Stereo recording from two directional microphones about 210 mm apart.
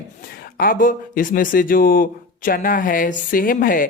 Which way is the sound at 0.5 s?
40° left (ahead or behind).